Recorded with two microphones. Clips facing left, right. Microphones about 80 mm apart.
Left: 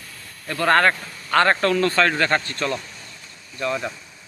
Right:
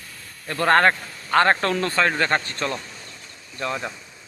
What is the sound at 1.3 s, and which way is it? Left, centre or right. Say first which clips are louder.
Speech: left 1 dB; right.